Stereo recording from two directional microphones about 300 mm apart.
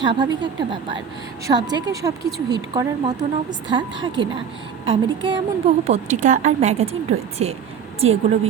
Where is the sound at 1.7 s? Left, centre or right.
Centre.